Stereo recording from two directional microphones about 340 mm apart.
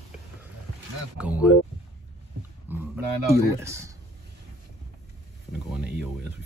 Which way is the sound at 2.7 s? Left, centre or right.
Centre.